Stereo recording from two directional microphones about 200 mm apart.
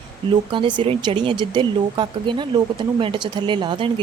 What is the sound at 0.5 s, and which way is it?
Speech, 25° right (ahead or behind).